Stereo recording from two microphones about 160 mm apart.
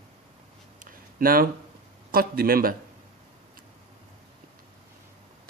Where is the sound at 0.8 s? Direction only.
65° right (ahead or behind).